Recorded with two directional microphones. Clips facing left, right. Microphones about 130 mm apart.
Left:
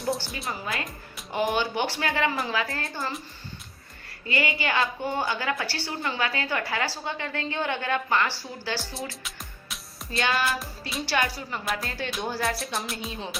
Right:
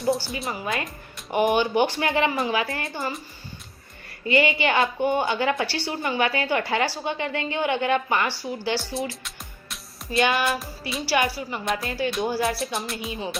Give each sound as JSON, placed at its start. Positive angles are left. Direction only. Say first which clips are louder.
{"t": 0.3, "sound": "music", "louder": "right 4 dB", "side_deg": 0}
{"t": 0.6, "sound": "a woman's voice", "louder": "right 4 dB", "side_deg": -20}
{"t": 4.3, "sound": "a woman's voice", "louder": "right 6 dB", "side_deg": -20}
{"t": 8.8, "sound": "music", "louder": "right 6 dB", "side_deg": 0}
{"t": 10.1, "sound": "a woman's voice", "louder": "right 5 dB", "side_deg": -20}
{"t": 10.4, "sound": "music", "louder": "right 3 dB", "side_deg": 0}